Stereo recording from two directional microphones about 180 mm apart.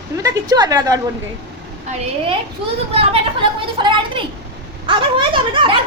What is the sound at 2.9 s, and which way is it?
A woman's voice, 30° right (ahead or behind).